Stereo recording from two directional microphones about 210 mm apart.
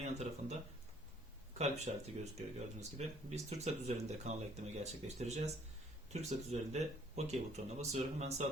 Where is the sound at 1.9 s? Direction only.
35° right (ahead or behind).